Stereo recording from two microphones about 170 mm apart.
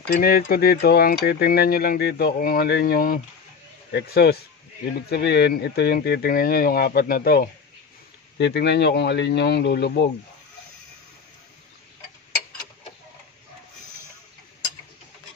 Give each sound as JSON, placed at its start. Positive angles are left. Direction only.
{"t": 0.1, "sound": "speech", "side_deg": 60}
{"t": 3.9, "sound": "speech", "side_deg": 70}
{"t": 5.1, "sound": "speech", "side_deg": 80}
{"t": 8.4, "sound": "speech", "side_deg": 90}